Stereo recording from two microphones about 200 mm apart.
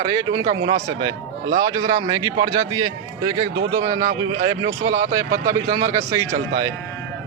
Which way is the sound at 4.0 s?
35° right (ahead or behind).